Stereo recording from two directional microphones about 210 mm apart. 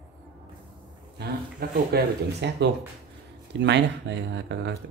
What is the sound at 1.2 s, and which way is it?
Speech, 50° right (ahead or behind).